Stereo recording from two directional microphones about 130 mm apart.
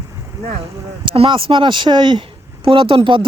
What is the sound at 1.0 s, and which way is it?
Speech, 40° right (ahead or behind).